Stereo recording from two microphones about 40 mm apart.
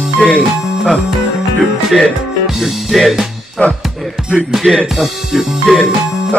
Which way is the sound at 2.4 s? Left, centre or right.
Centre.